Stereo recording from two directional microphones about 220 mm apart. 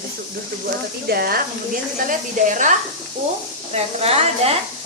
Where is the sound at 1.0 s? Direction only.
45° right (ahead or behind).